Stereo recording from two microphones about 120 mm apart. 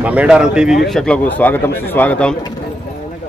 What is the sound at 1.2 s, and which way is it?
Speech, 15° left (ahead or behind).